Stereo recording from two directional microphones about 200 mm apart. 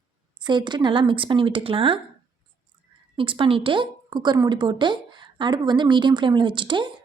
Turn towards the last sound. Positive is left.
turn(degrees=-25)  # may be behind; listen again after turning